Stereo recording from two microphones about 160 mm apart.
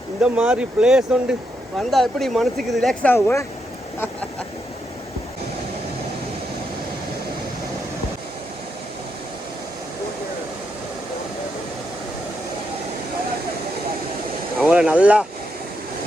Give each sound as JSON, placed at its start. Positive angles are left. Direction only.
{"t": 0.2, "sound": "speech", "side_deg": -5}
{"t": 14.6, "sound": "speech", "side_deg": -5}